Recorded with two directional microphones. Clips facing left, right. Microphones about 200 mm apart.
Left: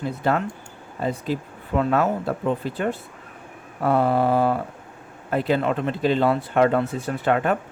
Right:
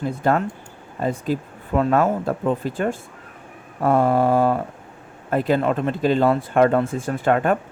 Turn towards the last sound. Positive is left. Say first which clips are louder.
# right 2 dB
turn(degrees=-45)  # may be behind; listen again after turning